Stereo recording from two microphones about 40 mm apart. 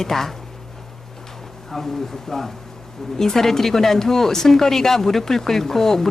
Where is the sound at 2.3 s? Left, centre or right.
Centre.